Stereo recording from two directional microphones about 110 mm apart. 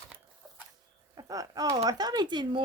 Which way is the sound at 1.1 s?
30° right (ahead or behind).